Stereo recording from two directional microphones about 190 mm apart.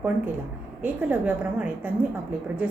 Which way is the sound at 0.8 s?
10° right (ahead or behind).